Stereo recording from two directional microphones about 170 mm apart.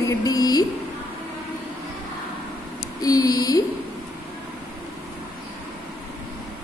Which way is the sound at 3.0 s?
20° left (ahead or behind).